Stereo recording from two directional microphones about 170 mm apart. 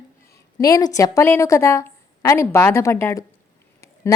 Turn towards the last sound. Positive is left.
turn(degrees=15)  # may be behind; listen again after turning